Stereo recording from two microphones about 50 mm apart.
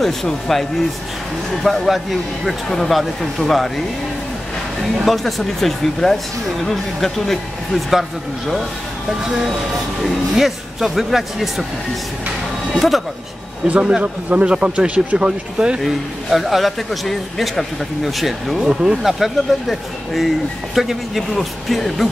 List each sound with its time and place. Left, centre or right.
0.0 s a man's voice: centre
4.9 s a man's voice: centre
10.0 s a man's voice: centre
12.7 s a man's voice: centre
13.7 s a man's voice: right
15.8 s a man's voice: centre
18.7 s speech: centre
19.1 s a man's voice: centre